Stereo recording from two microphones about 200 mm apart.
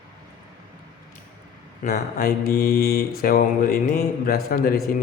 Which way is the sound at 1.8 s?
50° left (ahead or behind).